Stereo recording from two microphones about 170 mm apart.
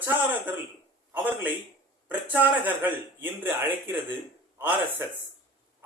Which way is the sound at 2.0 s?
10° right (ahead or behind).